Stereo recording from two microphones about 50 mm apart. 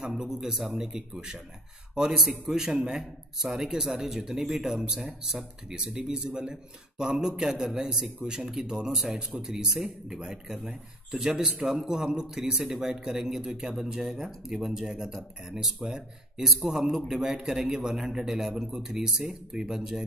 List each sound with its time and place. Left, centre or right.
0.0 s speech: centre